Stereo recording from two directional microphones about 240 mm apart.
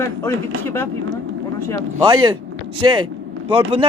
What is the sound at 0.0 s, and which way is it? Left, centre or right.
Speech, centre.